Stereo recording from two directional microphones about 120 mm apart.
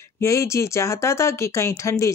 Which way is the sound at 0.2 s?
25° left (ahead or behind).